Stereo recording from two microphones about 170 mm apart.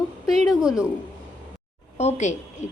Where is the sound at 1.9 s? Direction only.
40° left (ahead or behind).